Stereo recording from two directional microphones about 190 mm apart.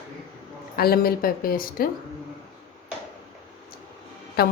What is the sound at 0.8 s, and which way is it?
A woman's voice, 55° left (ahead or behind).